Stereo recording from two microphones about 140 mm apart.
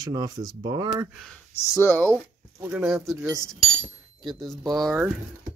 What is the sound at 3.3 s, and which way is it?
Speech, 5° left (ahead or behind).